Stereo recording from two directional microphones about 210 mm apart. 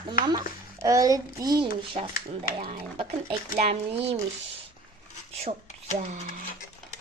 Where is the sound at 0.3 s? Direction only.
20° right (ahead or behind).